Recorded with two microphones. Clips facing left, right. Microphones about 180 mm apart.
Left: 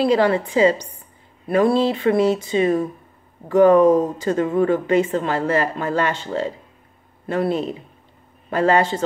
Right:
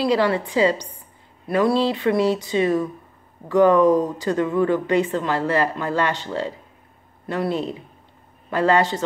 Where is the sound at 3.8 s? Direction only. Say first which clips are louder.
Left 2 dB; 25° left (ahead or behind).